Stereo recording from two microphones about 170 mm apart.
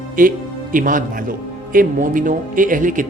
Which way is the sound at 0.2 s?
55° right (ahead or behind).